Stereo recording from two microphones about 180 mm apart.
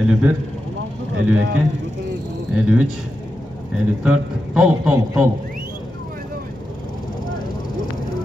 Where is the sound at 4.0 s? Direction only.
5° right (ahead or behind).